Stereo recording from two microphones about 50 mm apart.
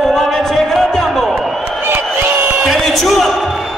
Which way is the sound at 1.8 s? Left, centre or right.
Right.